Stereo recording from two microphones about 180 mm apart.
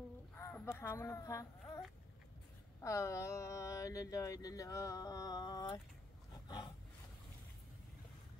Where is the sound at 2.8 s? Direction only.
15° left (ahead or behind).